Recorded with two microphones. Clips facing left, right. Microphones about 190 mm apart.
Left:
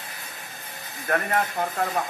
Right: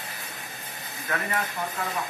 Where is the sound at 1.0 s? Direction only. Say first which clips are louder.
Left 5 dB; 50° left (ahead or behind).